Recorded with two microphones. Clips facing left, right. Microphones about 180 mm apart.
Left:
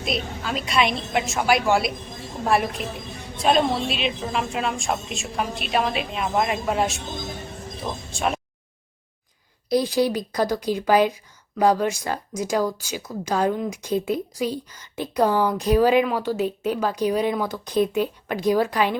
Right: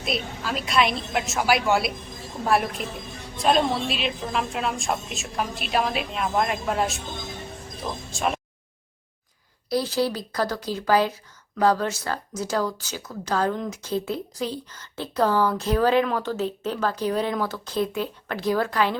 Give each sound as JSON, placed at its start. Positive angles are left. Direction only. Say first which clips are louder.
{"t": 0.0, "sound": "a woman's voice", "louder": "left 1 dB", "side_deg": 0}
{"t": 9.6, "sound": "a woman's voice", "louder": "left 3 dB", "side_deg": 15}